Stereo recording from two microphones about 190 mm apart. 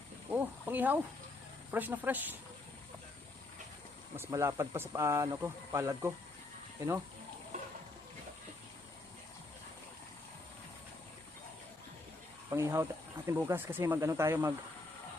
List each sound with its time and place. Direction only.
0.3 s a sound: 10° right (ahead or behind)
1.7 s speech: 10° right (ahead or behind)
4.2 s speech: 15° right (ahead or behind)
12.5 s speech: 15° right (ahead or behind)